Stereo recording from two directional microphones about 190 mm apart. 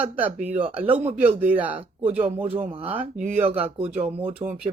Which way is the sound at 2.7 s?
30° right (ahead or behind).